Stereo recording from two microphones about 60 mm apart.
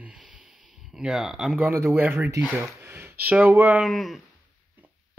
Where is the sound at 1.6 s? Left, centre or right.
Right.